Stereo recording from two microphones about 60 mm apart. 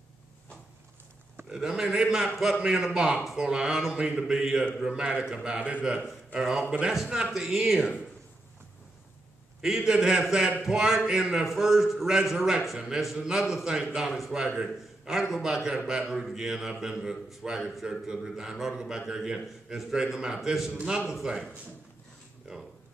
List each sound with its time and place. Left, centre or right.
1.5 s a man's voice: centre
5.6 s a man's voice: right
9.6 s a man's voice: centre